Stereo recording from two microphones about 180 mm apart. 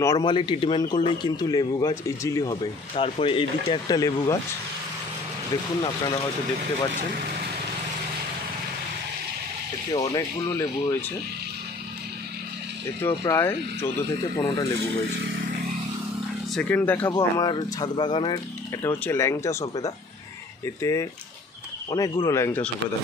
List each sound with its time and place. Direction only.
0.0 s speech: 20° left (ahead or behind)
6.9 s speech: 55° right (ahead or behind)
9.9 s speech: 20° left (ahead or behind)
13.0 s speech: 15° left (ahead or behind)
16.5 s speech: 10° left (ahead or behind)
17.1 s speech: 25° left (ahead or behind)
18.8 s speech: 10° left (ahead or behind)